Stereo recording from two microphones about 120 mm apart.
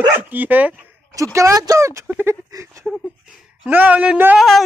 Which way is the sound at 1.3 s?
25° right (ahead or behind).